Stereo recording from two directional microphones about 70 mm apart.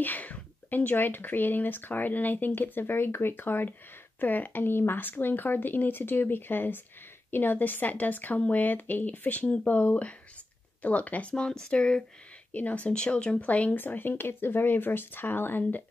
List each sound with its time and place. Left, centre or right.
0.0 s speech: left
11.3 s speech: centre; by 15.8 s left